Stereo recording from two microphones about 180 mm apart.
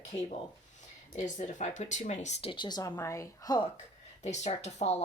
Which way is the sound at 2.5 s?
25° left (ahead or behind).